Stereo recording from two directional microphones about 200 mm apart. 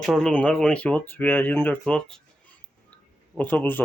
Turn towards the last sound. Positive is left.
turn(degrees=10)  # may be behind; listen again after turning